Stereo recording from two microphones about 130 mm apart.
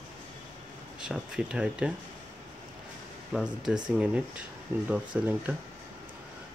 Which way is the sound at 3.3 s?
5° right (ahead or behind).